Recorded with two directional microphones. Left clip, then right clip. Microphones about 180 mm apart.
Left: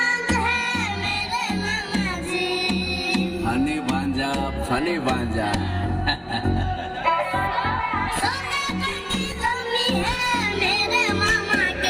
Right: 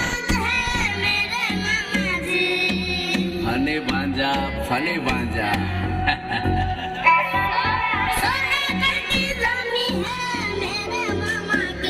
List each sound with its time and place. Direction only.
3.1 s music: 55° left (ahead or behind)
7.0 s music: 45° left (ahead or behind)
7.5 s music: 60° left (ahead or behind)
10.6 s music: 35° left (ahead or behind)